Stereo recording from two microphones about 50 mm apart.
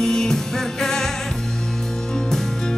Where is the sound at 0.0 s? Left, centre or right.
Centre.